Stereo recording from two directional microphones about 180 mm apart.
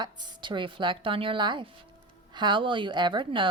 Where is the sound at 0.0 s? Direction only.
25° right (ahead or behind).